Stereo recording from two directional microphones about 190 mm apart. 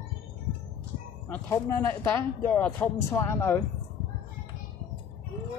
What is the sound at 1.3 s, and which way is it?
Speech, 15° left (ahead or behind).